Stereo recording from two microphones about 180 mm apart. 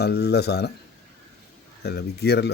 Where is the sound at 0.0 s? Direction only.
65° left (ahead or behind).